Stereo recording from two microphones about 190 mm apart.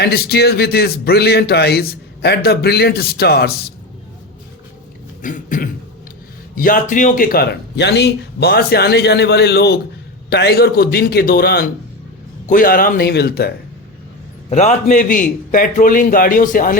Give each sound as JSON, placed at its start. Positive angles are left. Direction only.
{"t": 0.0, "sound": "speech", "side_deg": 55}
{"t": 5.2, "sound": "cough", "side_deg": 45}
{"t": 6.6, "sound": "a man's voice", "side_deg": 45}
{"t": 14.5, "sound": "a man's voice", "side_deg": 35}